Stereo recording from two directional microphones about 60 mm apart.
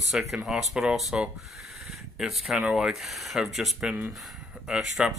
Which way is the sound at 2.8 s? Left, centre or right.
Centre.